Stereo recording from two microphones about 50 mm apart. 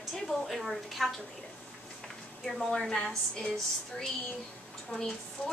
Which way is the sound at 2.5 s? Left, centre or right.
Centre.